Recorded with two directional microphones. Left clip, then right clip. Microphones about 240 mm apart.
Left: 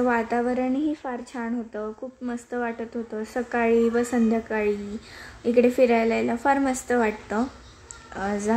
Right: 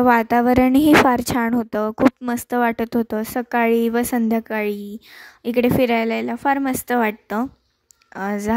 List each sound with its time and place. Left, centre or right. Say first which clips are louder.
0.0 s a woman's voice: right 8 dB; right